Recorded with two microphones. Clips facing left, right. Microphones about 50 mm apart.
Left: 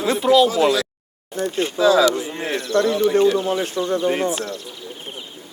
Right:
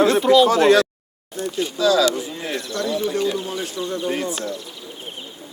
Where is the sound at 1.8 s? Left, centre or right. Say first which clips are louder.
Left 2 dB; left.